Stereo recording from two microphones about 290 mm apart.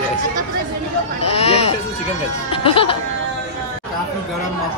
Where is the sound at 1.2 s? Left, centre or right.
Left.